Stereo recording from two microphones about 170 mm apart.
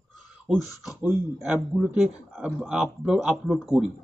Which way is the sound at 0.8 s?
5° right (ahead or behind).